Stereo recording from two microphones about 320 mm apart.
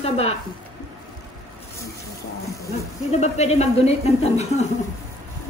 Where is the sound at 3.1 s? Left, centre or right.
Left.